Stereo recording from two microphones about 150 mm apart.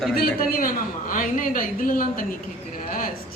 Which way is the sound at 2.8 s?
65° left (ahead or behind).